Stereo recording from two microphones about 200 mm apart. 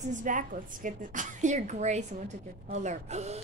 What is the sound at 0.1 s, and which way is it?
A woman's voice, 40° right (ahead or behind).